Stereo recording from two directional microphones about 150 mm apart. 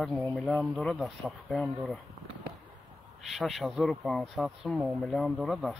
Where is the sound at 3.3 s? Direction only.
Centre (ahead or behind).